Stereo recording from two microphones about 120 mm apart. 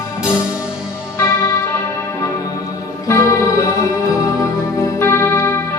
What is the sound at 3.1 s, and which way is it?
Music, 25° left (ahead or behind).